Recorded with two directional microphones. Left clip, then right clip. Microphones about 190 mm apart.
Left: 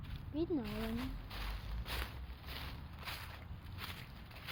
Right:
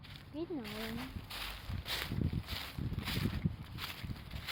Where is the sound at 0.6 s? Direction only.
50° right (ahead or behind).